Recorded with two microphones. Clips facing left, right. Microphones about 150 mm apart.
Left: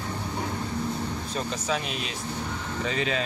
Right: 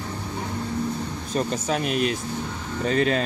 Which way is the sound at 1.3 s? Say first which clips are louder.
Right 6 dB; 50° right (ahead or behind).